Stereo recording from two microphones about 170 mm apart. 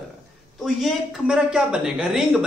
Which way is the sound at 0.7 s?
Centre (ahead or behind).